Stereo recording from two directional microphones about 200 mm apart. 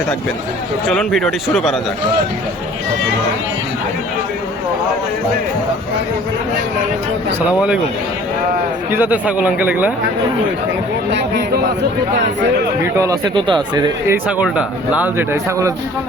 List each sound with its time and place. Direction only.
0.9 s speech: centre (ahead or behind)
8.9 s speech: 10° right (ahead or behind)
11.1 s speech: 55° right (ahead or behind)
12.8 s speech: 15° right (ahead or behind)
14.1 s speech: 5° right (ahead or behind)